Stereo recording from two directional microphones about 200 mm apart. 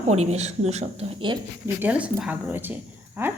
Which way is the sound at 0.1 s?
35° right (ahead or behind).